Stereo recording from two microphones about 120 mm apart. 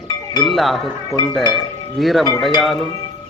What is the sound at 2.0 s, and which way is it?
Speech, centre (ahead or behind).